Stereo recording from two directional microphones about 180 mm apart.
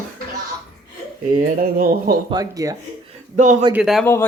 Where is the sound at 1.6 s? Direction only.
55° right (ahead or behind).